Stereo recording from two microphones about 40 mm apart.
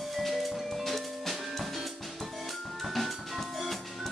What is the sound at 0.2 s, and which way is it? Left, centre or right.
Music, centre.